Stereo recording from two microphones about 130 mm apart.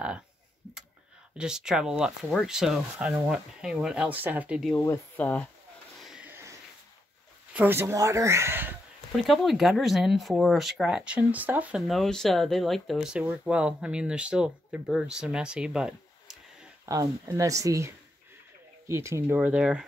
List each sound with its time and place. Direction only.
1.4 s speech: 5° right (ahead or behind)
4.7 s speech: 20° left (ahead or behind)
5.9 s a sound: 5° right (ahead or behind)
6.2 s a sound: 20° right (ahead or behind)
7.5 s speech: 15° right (ahead or behind)
9.1 s speech: centre (ahead or behind)
11.9 s speech: 5° left (ahead or behind)
16.8 s speech: 25° right (ahead or behind); by 19.8 s 10° right (ahead or behind)